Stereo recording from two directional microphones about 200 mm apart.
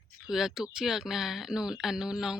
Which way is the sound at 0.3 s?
Centre (ahead or behind).